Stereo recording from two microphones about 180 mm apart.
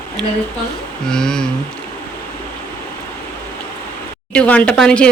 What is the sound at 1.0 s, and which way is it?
Speech, 5° left (ahead or behind).